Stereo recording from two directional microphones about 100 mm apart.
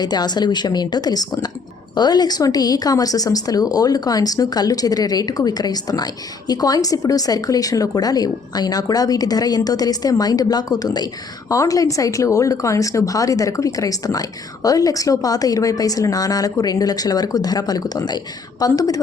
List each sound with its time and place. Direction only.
0.0 s a woman's voice: 45° left (ahead or behind)